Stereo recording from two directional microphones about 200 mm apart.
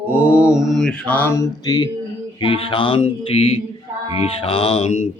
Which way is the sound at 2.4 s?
25° left (ahead or behind).